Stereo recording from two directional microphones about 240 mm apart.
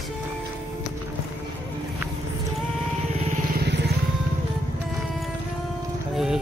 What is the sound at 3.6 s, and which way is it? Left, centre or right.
Vehicle, right.